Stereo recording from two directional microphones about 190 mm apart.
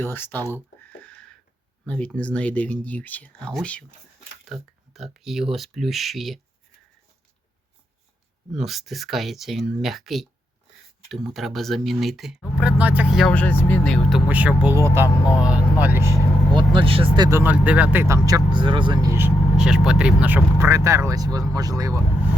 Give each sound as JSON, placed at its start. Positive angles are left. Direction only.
{"t": 0.0, "sound": "speech", "side_deg": 10}
{"t": 0.5, "sound": "a sound", "side_deg": 10}
{"t": 2.1, "sound": "speech", "side_deg": 5}
{"t": 4.9, "sound": "speech", "side_deg": 0}
{"t": 8.5, "sound": "speech", "side_deg": 0}
{"t": 13.3, "sound": "speech", "side_deg": 10}
{"t": 14.3, "sound": "speech", "side_deg": -10}
{"t": 17.2, "sound": "speech", "side_deg": -10}
{"t": 19.1, "sound": "speech", "side_deg": -10}